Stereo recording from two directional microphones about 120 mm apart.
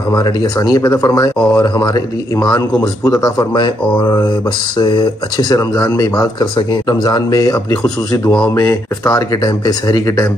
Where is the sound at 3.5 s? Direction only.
45° left (ahead or behind).